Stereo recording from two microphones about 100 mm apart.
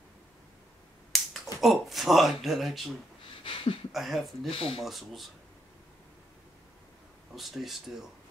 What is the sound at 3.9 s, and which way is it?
Speech, centre (ahead or behind).